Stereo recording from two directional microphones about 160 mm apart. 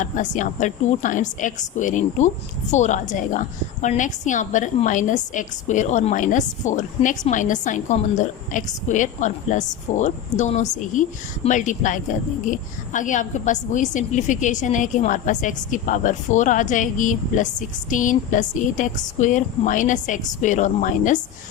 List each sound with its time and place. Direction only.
0.0 s a woman's voice: 50° left (ahead or behind)